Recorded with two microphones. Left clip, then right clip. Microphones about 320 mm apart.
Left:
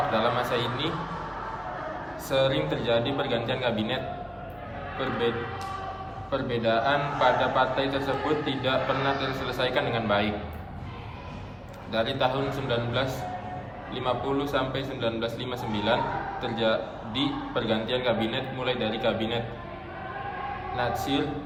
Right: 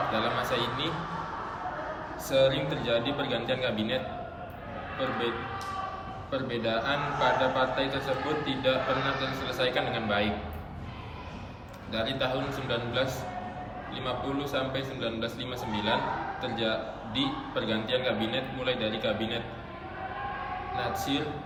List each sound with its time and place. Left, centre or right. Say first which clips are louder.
0.1 s a man's voice: left 3 dB; centre
2.3 s a man's voice: even; centre
6.3 s a man's voice: left 4 dB; centre
11.9 s a man's voice: left 4 dB; centre
20.7 s a man's voice: left 4 dB; centre